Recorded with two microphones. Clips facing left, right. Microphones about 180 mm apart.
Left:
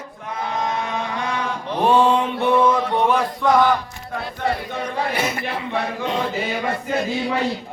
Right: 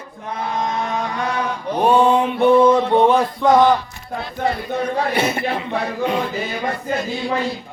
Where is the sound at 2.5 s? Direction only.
30° right (ahead or behind).